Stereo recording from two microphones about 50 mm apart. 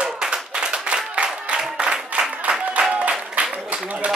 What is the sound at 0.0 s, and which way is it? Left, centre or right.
Clapping, centre.